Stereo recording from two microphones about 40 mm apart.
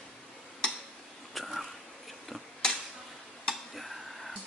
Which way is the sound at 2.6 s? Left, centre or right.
Centre.